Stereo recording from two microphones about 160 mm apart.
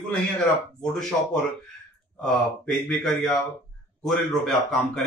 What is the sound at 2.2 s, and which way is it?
Speech, 5° left (ahead or behind).